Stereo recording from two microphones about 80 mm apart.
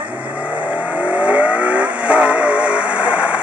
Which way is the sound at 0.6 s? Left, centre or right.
Centre.